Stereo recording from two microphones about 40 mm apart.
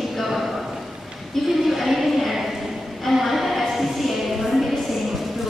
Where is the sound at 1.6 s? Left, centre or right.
Centre.